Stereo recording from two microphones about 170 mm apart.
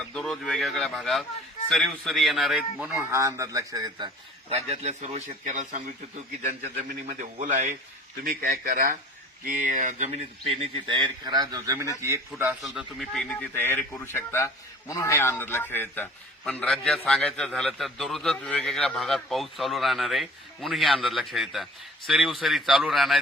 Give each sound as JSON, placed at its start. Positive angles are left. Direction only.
{"t": 0.1, "sound": "a man's voice", "side_deg": 5}
{"t": 4.4, "sound": "a man's voice", "side_deg": -40}
{"t": 7.1, "sound": "a man's voice", "side_deg": -50}
{"t": 8.2, "sound": "a man's voice", "side_deg": -60}
{"t": 12.6, "sound": "a man's voice", "side_deg": 0}